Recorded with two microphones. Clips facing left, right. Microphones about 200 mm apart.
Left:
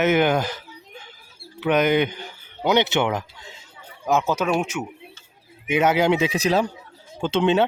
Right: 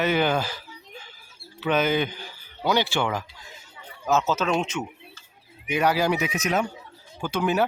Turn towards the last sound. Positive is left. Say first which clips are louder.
# left 4 dB
turn(degrees=25)  # may be behind; listen again after turning